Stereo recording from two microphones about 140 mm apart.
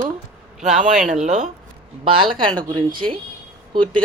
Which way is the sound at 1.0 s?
60° right (ahead or behind).